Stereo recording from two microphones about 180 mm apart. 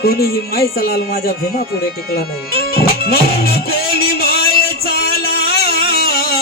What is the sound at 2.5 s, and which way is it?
Music, 60° left (ahead or behind).